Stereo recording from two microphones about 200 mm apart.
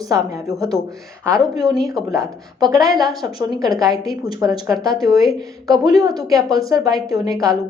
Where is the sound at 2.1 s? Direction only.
15° right (ahead or behind).